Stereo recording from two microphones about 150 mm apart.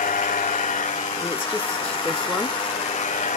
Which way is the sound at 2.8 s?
50° left (ahead or behind).